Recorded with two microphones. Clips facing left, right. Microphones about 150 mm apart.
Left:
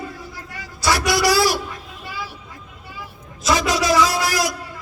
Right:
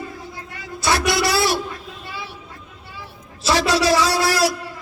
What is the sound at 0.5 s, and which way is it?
Vehicle, 25° right (ahead or behind).